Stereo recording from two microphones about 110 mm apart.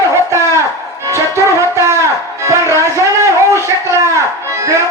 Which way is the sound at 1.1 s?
25° right (ahead or behind).